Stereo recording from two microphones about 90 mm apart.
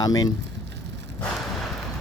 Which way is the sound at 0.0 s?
45° left (ahead or behind).